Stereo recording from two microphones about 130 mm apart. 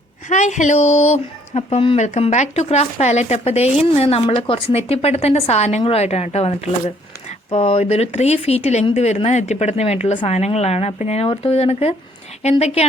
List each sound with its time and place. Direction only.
0.3 s speech: 65° left (ahead or behind)